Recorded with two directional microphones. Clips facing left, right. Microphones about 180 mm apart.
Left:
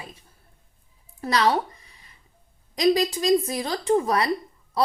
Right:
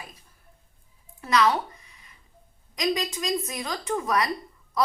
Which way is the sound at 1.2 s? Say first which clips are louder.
Left 1 dB; 35° left (ahead or behind).